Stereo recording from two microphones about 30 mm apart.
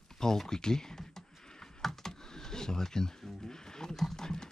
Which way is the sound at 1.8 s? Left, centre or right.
Centre.